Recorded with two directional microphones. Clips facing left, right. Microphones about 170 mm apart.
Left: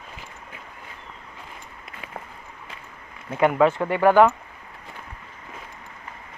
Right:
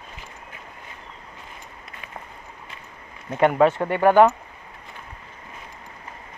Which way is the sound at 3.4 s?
25° right (ahead or behind).